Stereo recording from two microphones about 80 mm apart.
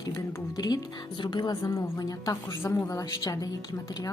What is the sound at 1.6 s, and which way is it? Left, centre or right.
A woman's voice, left.